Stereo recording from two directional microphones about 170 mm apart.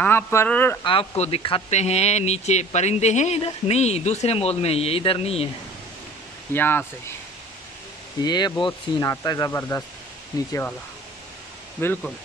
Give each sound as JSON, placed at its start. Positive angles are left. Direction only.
{"t": 0.0, "sound": "speech", "side_deg": 15}
{"t": 0.8, "sound": "speech", "side_deg": 35}
{"t": 6.5, "sound": "speech", "side_deg": 10}
{"t": 8.2, "sound": "speech", "side_deg": 25}
{"t": 11.8, "sound": "speech", "side_deg": 10}